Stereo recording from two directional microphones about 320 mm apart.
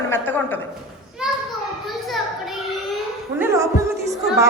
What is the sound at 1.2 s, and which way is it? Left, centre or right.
Children playing, centre.